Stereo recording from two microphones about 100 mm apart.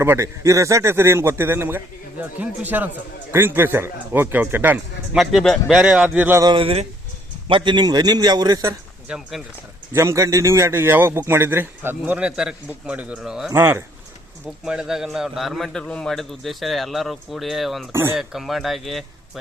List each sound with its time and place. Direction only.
0.0 s a man's voice: 30° right (ahead or behind)
5.1 s a man's voice: centre (ahead or behind)
6.6 s a man's voice: 75° right (ahead or behind)
7.4 s a man's voice: 55° right (ahead or behind)
9.0 s speech: 5° right (ahead or behind)
9.9 s a man's voice: 30° right (ahead or behind); by 13.5 s 5° right (ahead or behind)
13.5 s a man's voice: 30° right (ahead or behind)
14.6 s a man's voice: 5° right (ahead or behind)